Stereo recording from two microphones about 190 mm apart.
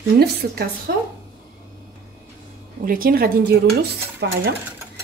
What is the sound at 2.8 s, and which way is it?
Speech, 50° right (ahead or behind).